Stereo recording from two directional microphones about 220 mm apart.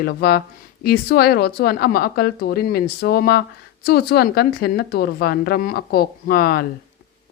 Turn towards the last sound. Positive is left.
turn(degrees=45)  # may be behind; listen again after turning